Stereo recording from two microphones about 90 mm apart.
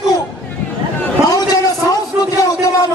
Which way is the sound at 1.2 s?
45° left (ahead or behind).